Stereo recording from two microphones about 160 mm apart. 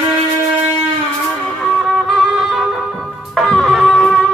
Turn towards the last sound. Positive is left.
turn(degrees=0)  # may be behind; listen again after turning